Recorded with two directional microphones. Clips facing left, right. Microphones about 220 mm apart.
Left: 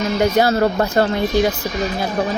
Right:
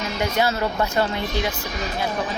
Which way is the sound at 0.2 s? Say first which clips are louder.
Left 7 dB; 40° left (ahead or behind).